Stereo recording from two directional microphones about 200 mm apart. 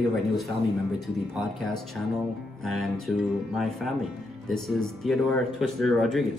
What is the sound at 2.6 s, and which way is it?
Speech, centre (ahead or behind).